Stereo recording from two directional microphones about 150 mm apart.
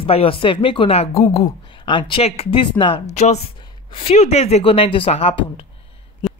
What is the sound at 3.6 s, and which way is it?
Speech, 35° left (ahead or behind).